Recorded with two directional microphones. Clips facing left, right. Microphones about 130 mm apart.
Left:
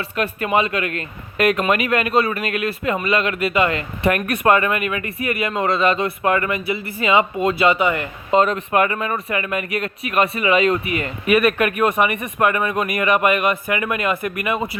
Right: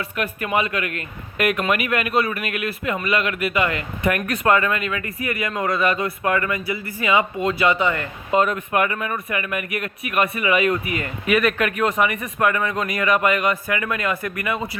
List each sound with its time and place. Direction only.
0.0 s speech: 30° left (ahead or behind)
8.3 s speech: 30° left (ahead or behind)